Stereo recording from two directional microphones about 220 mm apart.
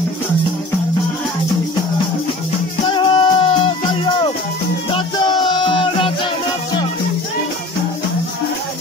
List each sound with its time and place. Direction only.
2.9 s music: 20° left (ahead or behind)